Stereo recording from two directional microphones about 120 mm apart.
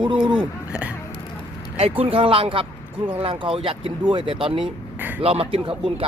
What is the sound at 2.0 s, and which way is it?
Speech, 50° right (ahead or behind).